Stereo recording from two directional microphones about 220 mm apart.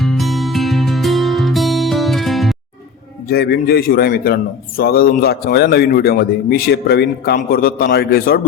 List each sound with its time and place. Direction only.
0.0 s music: centre (ahead or behind)
3.2 s a man's voice: 45° left (ahead or behind)